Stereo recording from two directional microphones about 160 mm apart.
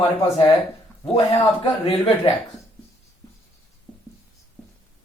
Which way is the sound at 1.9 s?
35° left (ahead or behind).